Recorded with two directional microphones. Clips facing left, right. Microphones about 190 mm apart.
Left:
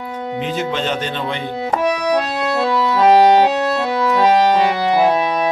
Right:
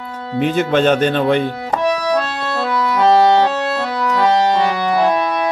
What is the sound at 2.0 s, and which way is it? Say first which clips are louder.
Organ: left 1 dB; 15° left (ahead or behind).